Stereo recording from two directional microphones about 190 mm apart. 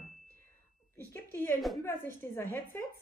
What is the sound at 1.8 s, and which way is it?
A woman's voice, 10° left (ahead or behind).